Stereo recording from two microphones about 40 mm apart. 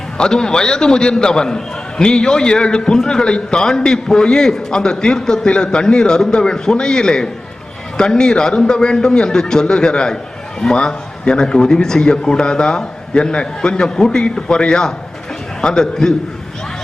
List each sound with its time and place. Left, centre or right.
0.2 s a man's voice: centre